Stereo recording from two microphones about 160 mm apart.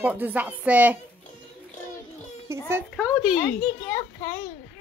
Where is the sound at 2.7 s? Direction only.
5° right (ahead or behind).